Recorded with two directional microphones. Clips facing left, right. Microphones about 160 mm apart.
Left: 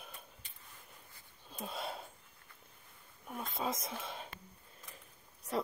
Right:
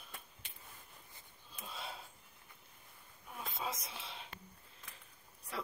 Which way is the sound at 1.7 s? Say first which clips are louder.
Left 5 dB; 50° left (ahead or behind).